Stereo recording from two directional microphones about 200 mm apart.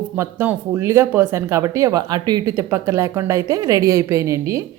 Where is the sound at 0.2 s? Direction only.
15° right (ahead or behind).